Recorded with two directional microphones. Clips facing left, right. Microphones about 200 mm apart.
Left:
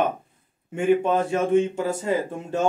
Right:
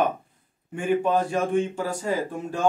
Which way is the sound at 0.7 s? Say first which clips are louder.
Left 2 dB; 25° left (ahead or behind).